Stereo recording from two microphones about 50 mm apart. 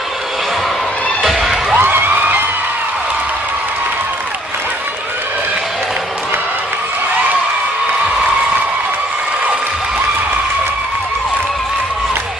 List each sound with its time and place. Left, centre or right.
1.2 s music: centre
1.8 s music: right